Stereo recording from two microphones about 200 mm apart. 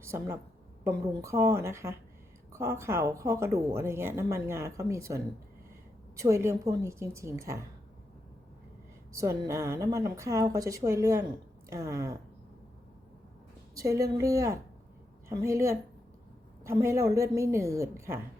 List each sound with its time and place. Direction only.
0.0 s speech: 15° right (ahead or behind)
9.1 s speech: 15° right (ahead or behind)
13.7 s speech: 15° right (ahead or behind)